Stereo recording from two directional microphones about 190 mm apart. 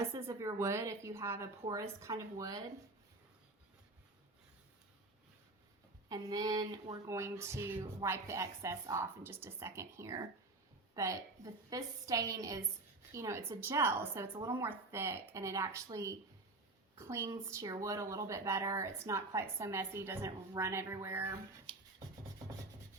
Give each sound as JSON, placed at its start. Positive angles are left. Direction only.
{"t": 0.1, "sound": "a woman's voice", "side_deg": -15}
{"t": 6.1, "sound": "a woman's voice", "side_deg": -20}